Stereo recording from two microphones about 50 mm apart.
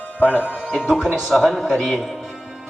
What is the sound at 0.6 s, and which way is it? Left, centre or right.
A man's voice, centre.